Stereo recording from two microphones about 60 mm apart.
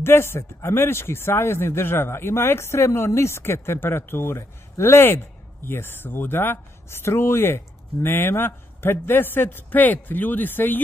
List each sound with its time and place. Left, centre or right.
0.0 s speech: left